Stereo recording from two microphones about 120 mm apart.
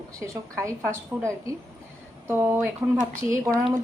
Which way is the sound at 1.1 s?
15° right (ahead or behind).